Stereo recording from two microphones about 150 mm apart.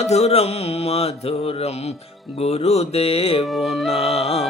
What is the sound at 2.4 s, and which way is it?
Music, 45° left (ahead or behind).